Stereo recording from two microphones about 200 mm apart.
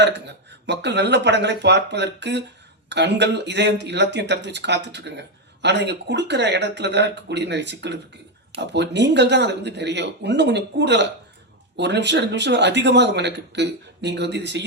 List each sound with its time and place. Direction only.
0.0 s speech: 60° right (ahead or behind)